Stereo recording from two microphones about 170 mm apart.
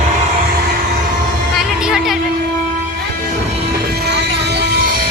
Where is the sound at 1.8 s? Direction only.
5° right (ahead or behind).